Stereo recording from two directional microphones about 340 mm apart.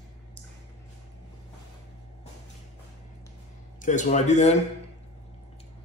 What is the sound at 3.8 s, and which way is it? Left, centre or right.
Speech, left.